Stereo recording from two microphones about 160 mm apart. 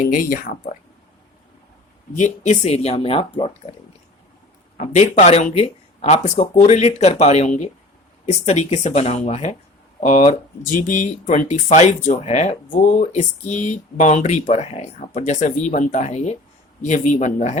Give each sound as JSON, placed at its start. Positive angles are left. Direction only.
{"t": 0.0, "sound": "speech", "side_deg": 55}
{"t": 2.1, "sound": "speech", "side_deg": 45}
{"t": 4.8, "sound": "speech", "side_deg": 40}